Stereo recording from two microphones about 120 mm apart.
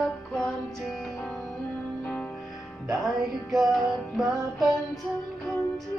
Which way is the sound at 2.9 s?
Centre (ahead or behind).